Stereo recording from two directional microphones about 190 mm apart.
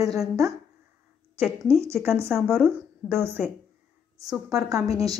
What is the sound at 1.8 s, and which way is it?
A woman's voice, 10° right (ahead or behind).